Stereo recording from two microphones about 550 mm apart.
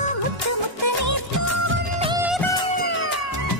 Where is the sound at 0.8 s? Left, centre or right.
Right.